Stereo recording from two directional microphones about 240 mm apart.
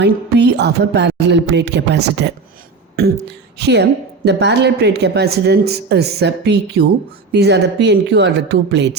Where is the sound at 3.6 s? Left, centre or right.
Right.